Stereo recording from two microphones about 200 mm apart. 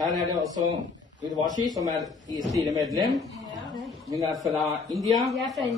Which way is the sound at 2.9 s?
Centre (ahead or behind).